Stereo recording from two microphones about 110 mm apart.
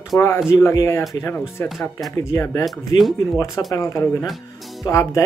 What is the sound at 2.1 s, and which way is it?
Speech, 30° left (ahead or behind).